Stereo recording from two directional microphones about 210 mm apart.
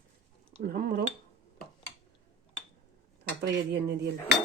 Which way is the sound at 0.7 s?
45° right (ahead or behind).